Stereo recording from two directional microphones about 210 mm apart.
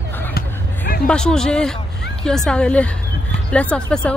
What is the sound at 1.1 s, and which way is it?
Speech, 5° left (ahead or behind).